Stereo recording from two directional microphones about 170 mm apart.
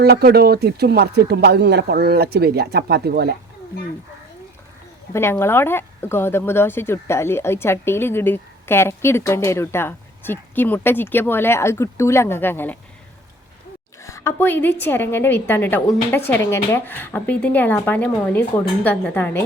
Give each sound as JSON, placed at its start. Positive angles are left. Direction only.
{"t": 0.0, "sound": "speech", "side_deg": -65}
{"t": 5.1, "sound": "speech", "side_deg": 15}
{"t": 14.0, "sound": "speech", "side_deg": 15}